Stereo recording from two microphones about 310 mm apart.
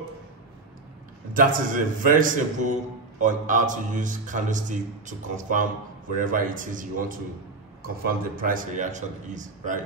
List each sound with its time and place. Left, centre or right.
1.3 s a man's voice: right